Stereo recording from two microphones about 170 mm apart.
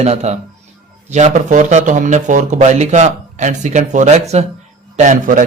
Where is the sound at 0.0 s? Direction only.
40° right (ahead or behind).